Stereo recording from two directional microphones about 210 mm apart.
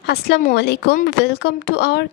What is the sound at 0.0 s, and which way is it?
A woman's voice, 50° left (ahead or behind).